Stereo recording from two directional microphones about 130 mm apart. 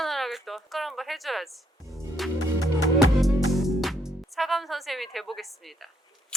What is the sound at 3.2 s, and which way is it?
Music, centre (ahead or behind).